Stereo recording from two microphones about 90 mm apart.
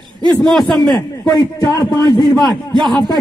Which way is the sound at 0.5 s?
5° left (ahead or behind).